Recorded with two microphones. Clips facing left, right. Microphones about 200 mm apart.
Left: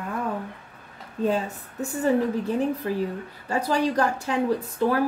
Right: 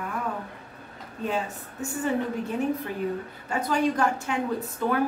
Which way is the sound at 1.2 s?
35° left (ahead or behind).